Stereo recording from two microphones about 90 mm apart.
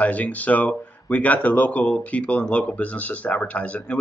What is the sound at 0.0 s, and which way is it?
Speech, 15° left (ahead or behind).